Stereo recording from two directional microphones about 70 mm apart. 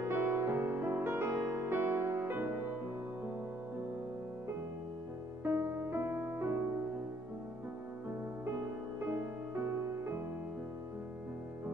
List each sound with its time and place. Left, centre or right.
0.0 s music: right
5.4 s music: right
9.0 s music: right